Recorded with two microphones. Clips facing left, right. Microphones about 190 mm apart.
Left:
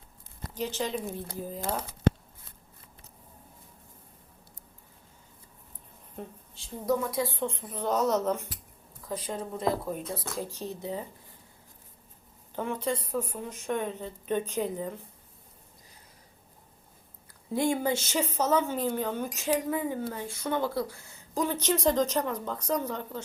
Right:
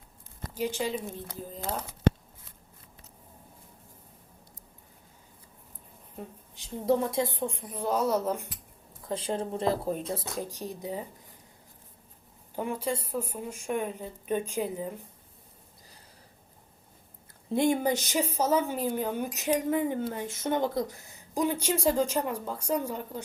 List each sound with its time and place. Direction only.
0.5 s a woman's voice: 10° right (ahead or behind)
6.5 s a woman's voice: 15° right (ahead or behind)
9.0 s speech: 25° right (ahead or behind)
10.2 s a woman's voice: 15° right (ahead or behind)
12.5 s a woman's voice: 10° right (ahead or behind)
17.5 s a woman's voice: 25° right (ahead or behind)